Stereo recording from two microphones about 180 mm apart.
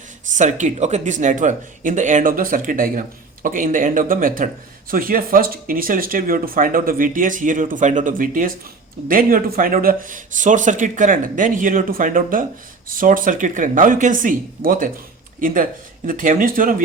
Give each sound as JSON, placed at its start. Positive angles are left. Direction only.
{"t": 0.3, "sound": "speech", "side_deg": -40}